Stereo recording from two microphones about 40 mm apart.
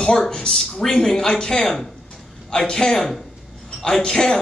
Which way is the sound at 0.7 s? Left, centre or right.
Centre.